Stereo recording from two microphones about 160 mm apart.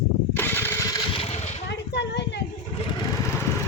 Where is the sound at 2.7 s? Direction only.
30° left (ahead or behind).